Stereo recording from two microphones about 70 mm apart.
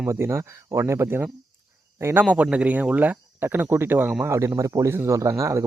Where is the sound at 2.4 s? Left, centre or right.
Centre.